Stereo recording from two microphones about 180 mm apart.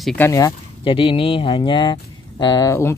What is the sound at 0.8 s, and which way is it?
Speech, 30° left (ahead or behind).